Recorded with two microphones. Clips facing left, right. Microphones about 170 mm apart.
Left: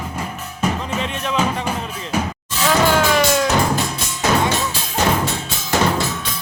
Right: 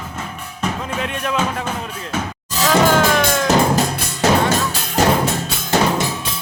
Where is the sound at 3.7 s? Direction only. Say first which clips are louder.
Right 3 dB; 55° right (ahead or behind).